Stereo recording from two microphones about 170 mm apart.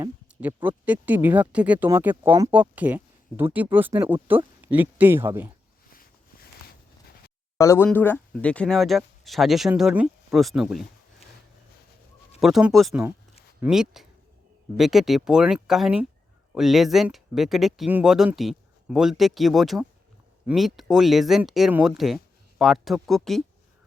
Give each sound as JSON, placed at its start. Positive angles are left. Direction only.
{"t": 0.3, "sound": "speech", "side_deg": -10}
{"t": 7.6, "sound": "speech", "side_deg": 15}
{"t": 12.4, "sound": "speech", "side_deg": 0}